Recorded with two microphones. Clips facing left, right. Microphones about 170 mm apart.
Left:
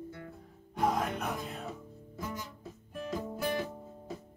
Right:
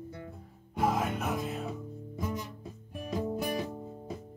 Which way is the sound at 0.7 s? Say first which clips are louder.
Right 1 dB; 5° right (ahead or behind).